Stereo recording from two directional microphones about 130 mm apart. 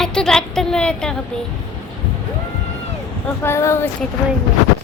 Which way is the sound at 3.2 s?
20° left (ahead or behind).